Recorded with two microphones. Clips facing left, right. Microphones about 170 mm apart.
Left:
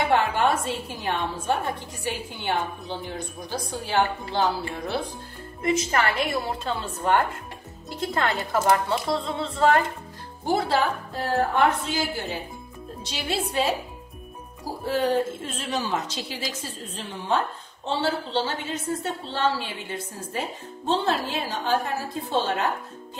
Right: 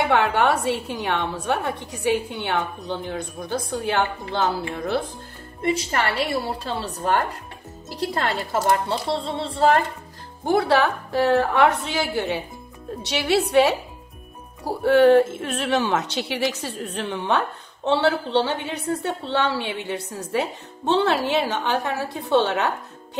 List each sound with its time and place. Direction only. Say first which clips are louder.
0.1 s a woman's voice: right 1 dB; 65° right (ahead or behind)
5.6 s a woman's voice: even; 35° right (ahead or behind)
10.4 s a woman's voice: right 4 dB; 60° right (ahead or behind)